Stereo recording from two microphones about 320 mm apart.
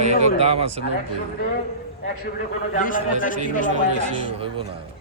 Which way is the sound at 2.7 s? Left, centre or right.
Left.